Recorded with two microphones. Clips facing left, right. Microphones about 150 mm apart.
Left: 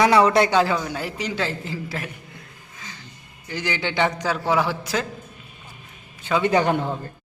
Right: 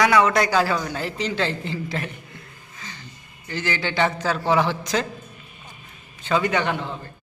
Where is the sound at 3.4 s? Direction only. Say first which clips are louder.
Even; 15° left (ahead or behind).